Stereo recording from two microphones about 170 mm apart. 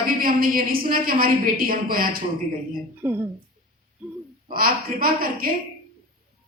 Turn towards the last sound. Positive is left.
turn(degrees=-60)  # may be behind; listen again after turning